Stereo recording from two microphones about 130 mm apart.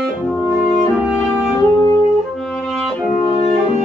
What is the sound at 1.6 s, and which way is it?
Music, 25° left (ahead or behind).